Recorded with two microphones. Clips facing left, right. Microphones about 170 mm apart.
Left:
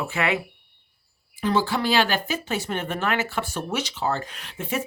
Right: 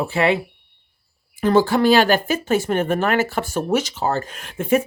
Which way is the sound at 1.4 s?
45° right (ahead or behind).